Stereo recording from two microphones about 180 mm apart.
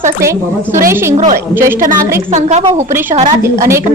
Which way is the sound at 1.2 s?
45° right (ahead or behind).